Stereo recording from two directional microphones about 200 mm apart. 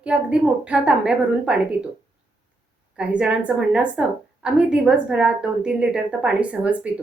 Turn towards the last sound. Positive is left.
turn(degrees=-5)  # may be behind; listen again after turning